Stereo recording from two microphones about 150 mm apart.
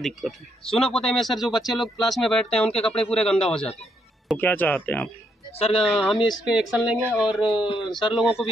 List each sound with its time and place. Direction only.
0.0 s speech: centre (ahead or behind)
5.6 s speech: 40° left (ahead or behind)
5.9 s speech: centre (ahead or behind)
6.1 s speech: 30° left (ahead or behind)
6.4 s speech: 5° right (ahead or behind)
7.5 s speech: 35° left (ahead or behind)
8.1 s speech: 5° right (ahead or behind)